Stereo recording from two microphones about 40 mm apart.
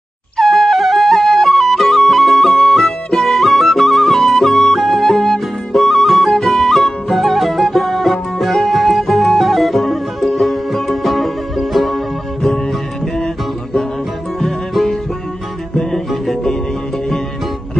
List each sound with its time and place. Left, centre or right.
0.4 s music: centre
14.4 s music: centre